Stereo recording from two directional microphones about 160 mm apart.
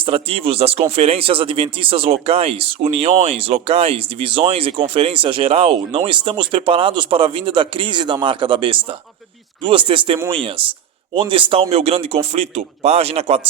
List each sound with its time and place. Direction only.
0.0 s speech: 35° right (ahead or behind)